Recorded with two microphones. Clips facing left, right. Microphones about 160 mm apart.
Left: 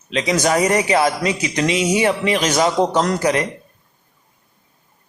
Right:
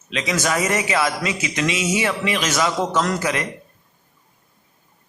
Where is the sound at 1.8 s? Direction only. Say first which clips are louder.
Left 7 dB; 20° left (ahead or behind).